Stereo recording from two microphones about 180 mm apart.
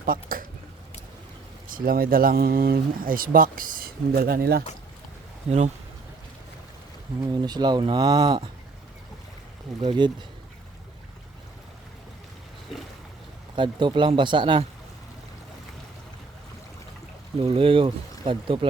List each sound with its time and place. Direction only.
0.0 s a sound: 50° right (ahead or behind)
1.7 s speech: 55° right (ahead or behind)
5.5 s speech: 40° right (ahead or behind)
7.2 s speech: 25° right (ahead or behind)
9.8 s speech: 25° right (ahead or behind)
13.6 s speech: 25° right (ahead or behind)
17.4 s speech: 30° right (ahead or behind)